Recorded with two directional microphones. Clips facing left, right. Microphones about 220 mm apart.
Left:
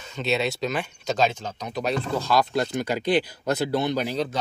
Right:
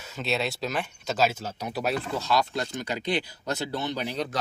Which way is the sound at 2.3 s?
45° left (ahead or behind).